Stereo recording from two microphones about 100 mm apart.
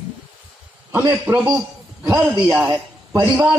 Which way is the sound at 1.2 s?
20° right (ahead or behind).